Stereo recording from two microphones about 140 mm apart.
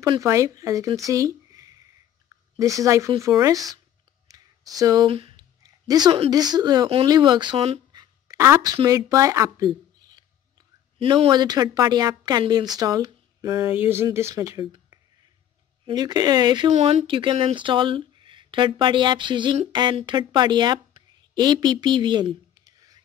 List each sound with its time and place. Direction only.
0.2 s speech: 20° right (ahead or behind)
4.3 s a sound: 25° right (ahead or behind)
4.7 s speech: 25° right (ahead or behind)
5.0 s speech: 40° right (ahead or behind)
5.6 s a sound: 30° right (ahead or behind)
6.3 s speech: 30° right (ahead or behind)
7.9 s a sound: 25° right (ahead or behind)
8.8 s speech: 25° right (ahead or behind)
11.0 s speech: 40° right (ahead or behind)
11.2 s speech: 30° right (ahead or behind)
15.9 s speech: 30° right (ahead or behind)
16.7 s a woman's voice: 45° right (ahead or behind); by 22.9 s 25° right (ahead or behind)